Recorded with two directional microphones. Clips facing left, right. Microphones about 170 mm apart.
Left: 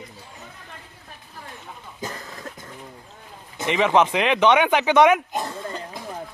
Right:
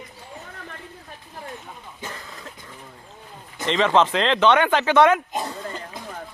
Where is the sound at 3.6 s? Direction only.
10° left (ahead or behind).